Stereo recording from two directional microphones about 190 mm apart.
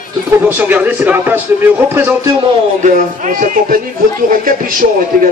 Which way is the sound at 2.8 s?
45° right (ahead or behind).